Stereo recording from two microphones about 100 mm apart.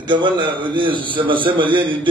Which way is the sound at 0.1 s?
55° right (ahead or behind).